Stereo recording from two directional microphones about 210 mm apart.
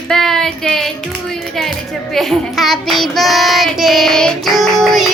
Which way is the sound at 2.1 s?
Centre (ahead or behind).